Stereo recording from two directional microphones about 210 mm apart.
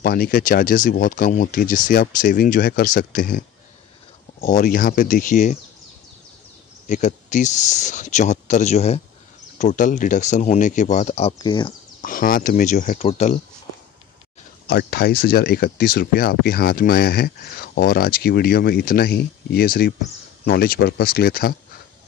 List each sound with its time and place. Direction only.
0.0 s speech: 45° left (ahead or behind)
6.9 s speech: 35° left (ahead or behind)
12.0 s speech: 40° left (ahead or behind)
14.7 s speech: 50° left (ahead or behind)